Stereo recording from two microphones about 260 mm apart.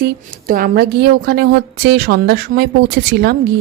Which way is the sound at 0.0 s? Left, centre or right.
Right.